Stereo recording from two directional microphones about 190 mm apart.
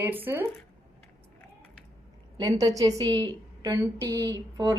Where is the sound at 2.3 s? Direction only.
20° right (ahead or behind).